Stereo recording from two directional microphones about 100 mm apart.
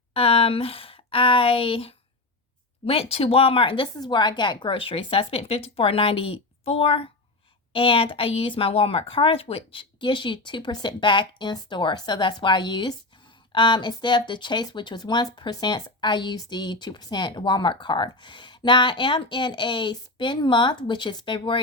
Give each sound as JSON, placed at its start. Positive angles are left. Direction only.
{"t": 0.1, "sound": "a woman's voice", "side_deg": 70}
{"t": 3.9, "sound": "a woman's voice", "side_deg": 45}